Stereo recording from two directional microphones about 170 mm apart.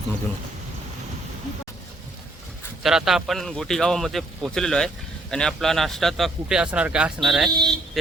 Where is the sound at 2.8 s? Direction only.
Centre (ahead or behind).